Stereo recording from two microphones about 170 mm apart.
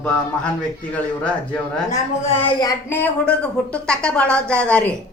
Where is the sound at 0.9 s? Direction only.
10° left (ahead or behind).